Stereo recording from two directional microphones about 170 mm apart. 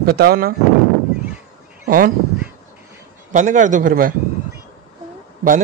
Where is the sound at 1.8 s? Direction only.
60° right (ahead or behind).